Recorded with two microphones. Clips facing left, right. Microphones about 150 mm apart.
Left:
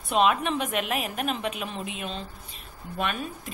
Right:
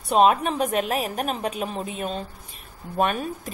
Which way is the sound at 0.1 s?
40° right (ahead or behind).